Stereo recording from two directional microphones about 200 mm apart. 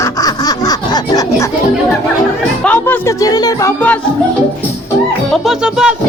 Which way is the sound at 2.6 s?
10° left (ahead or behind).